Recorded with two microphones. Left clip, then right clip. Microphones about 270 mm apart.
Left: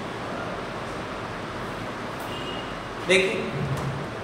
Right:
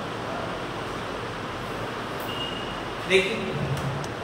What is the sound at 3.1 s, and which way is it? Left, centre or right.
Speech, left.